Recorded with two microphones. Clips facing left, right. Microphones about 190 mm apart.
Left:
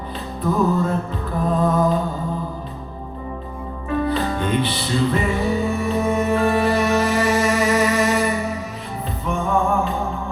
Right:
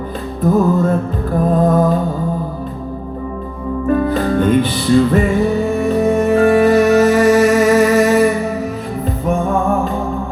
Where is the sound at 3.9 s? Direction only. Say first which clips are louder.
Right 6 dB; 50° right (ahead or behind).